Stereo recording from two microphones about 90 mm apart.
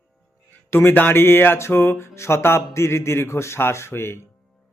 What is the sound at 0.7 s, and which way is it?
Speech, 25° left (ahead or behind).